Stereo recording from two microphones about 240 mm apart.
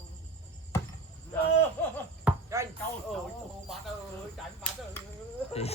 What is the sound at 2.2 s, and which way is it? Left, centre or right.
Chop, centre.